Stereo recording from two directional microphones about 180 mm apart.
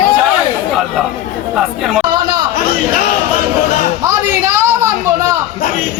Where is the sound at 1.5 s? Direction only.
Centre (ahead or behind).